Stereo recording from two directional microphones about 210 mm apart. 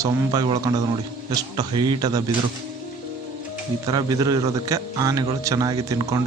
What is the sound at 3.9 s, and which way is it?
A man's voice, 20° right (ahead or behind).